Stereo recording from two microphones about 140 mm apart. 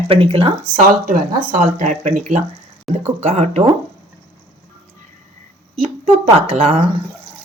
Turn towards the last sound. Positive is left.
turn(degrees=-45)  # may be behind; listen again after turning